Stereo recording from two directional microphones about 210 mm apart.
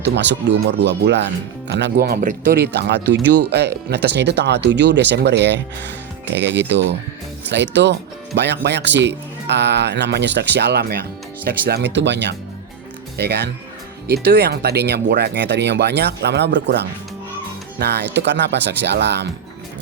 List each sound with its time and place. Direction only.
0.0 s speech: 55° right (ahead or behind)